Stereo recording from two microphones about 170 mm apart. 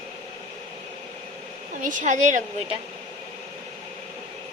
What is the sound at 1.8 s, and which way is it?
Speech, 50° right (ahead or behind).